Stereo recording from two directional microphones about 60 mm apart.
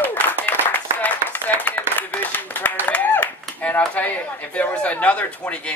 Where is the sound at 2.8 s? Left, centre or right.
Left.